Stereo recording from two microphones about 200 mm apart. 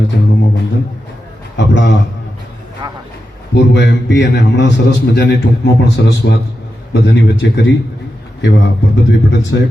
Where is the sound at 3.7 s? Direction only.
60° left (ahead or behind).